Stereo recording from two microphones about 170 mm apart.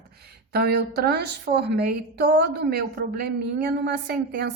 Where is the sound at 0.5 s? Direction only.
70° right (ahead or behind).